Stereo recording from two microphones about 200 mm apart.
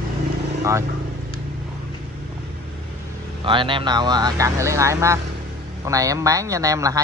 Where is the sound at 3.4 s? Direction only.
25° right (ahead or behind).